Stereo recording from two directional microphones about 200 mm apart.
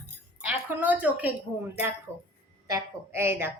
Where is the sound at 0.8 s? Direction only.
10° right (ahead or behind).